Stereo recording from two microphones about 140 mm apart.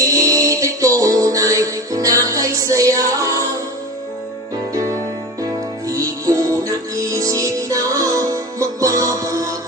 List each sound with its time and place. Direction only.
0.0 s music: 25° right (ahead or behind)
4.7 s music: 25° right (ahead or behind)